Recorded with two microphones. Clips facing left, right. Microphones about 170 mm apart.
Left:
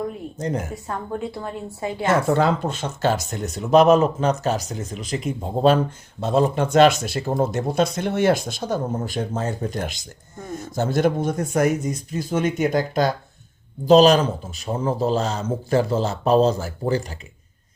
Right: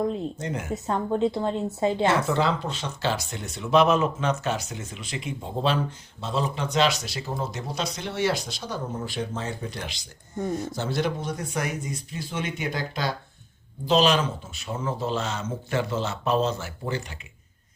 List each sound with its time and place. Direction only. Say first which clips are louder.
0.3 s a man's voice: left 6 dB; 40° left (ahead or behind)
0.7 s a woman's voice: right 3 dB; 20° right (ahead or behind)
2.0 s a man's voice: left 9 dB; 45° left (ahead or behind)